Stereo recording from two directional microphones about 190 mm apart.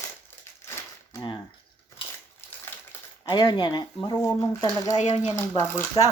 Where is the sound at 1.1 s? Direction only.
25° left (ahead or behind).